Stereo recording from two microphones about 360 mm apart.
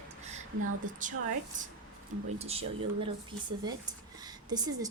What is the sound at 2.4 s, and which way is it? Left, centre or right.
Speech, centre.